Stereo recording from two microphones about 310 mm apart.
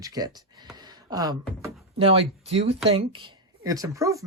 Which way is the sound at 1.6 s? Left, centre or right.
Centre.